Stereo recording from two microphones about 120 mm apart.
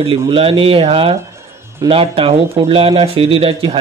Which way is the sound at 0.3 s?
50° right (ahead or behind).